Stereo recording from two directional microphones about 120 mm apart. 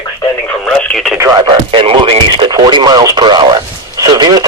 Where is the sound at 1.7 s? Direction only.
45° right (ahead or behind).